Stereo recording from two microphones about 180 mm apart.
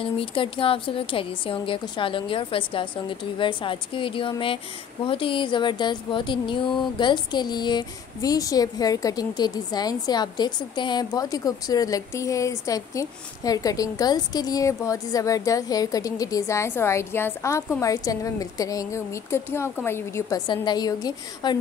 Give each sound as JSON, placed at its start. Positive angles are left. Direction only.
{"t": 0.0, "sound": "speech", "side_deg": 30}